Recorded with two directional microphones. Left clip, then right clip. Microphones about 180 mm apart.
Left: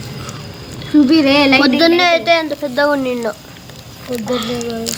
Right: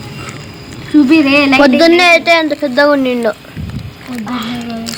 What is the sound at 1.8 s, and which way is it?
A woman's voice, 30° right (ahead or behind).